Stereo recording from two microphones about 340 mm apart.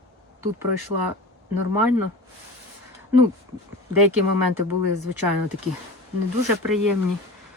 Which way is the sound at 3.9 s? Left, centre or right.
Right.